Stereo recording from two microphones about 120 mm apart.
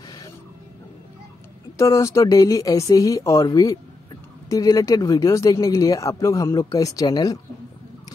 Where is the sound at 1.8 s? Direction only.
25° left (ahead or behind).